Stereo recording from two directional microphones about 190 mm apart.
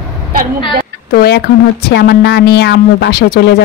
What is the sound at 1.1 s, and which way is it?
A man's voice, 55° left (ahead or behind).